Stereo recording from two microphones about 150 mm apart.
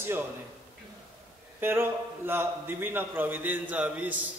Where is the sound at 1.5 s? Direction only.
15° right (ahead or behind).